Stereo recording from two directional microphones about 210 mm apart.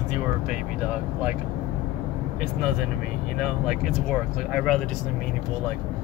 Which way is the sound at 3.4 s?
Centre (ahead or behind).